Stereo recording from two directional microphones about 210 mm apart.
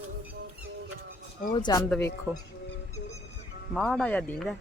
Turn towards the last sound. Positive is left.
turn(degrees=5)  # may be behind; listen again after turning